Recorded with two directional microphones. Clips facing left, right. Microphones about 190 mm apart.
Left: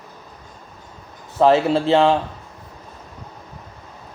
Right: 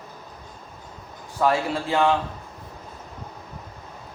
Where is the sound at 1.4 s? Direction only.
25° left (ahead or behind).